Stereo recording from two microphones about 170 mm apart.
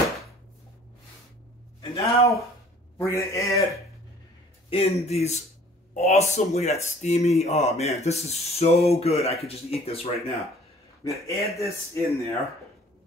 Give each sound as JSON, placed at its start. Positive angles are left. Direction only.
{"t": 1.8, "sound": "a man's voice", "side_deg": 20}
{"t": 4.6, "sound": "speech", "side_deg": 35}
{"t": 11.1, "sound": "a man's voice", "side_deg": 20}